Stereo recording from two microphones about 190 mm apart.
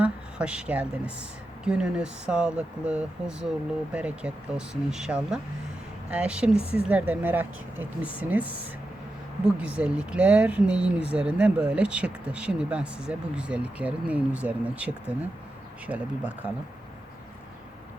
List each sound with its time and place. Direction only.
0.0 s a woman's voice: 5° right (ahead or behind)
9.6 s speech: 5° right (ahead or behind)